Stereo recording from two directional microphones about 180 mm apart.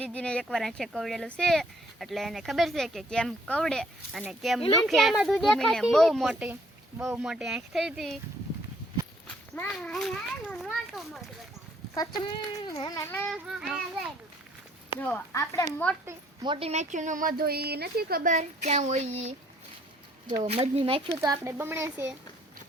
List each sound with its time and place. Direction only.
0.0 s speech: 5° left (ahead or behind)
9.6 s speech: 5° left (ahead or behind)
11.9 s speech: 20° left (ahead or behind)
13.3 s speech: 5° right (ahead or behind)
15.0 s speech: 10° left (ahead or behind)
16.0 s speech: 25° right (ahead or behind)
20.4 s speech: 35° right (ahead or behind)
21.1 s speech: 15° right (ahead or behind)